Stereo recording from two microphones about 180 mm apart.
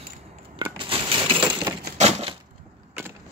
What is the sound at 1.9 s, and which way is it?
Typewriter, 35° right (ahead or behind).